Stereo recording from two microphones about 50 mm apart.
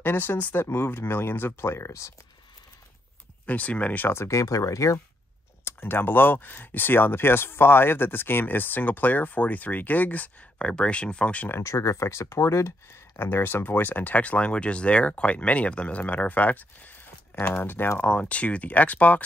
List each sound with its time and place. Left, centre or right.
0.0 s speech: left
3.4 s speech: left
4.1 s speech: left
5.7 s speech: left
11.6 s speech: left
13.2 s speech: left
17.9 s speech: left